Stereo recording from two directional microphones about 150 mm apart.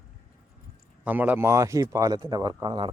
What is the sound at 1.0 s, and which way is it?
Speech, 10° right (ahead or behind).